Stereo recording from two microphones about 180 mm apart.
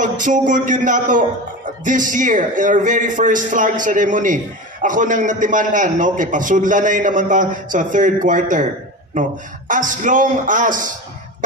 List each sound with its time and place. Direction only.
0.0 s a man's voice: 45° right (ahead or behind)
9.7 s a man's voice: 45° right (ahead or behind)